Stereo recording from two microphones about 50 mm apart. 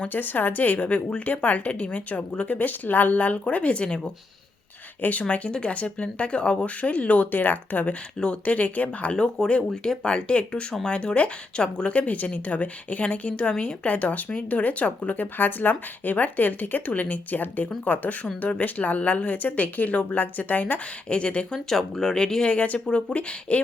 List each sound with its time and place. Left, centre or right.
0.0 s a woman's voice: left; by 4.1 s centre
5.3 s a woman's voice: left
21.1 s speech: left
21.7 s speech: centre
22.5 s speech: left